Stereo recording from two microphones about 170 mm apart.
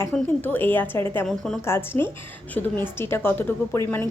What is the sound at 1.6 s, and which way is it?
A woman's voice, 15° left (ahead or behind).